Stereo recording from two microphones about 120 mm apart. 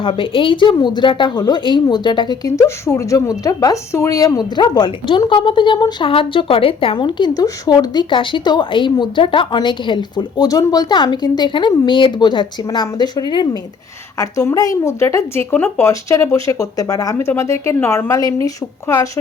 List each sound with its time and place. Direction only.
0.0 s a woman's voice: 45° left (ahead or behind)
2.6 s a woman's voice: 25° left (ahead or behind)
14.2 s speech: 25° left (ahead or behind)